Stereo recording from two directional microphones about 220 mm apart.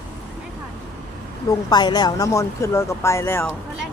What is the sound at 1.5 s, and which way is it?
Speech, 20° left (ahead or behind).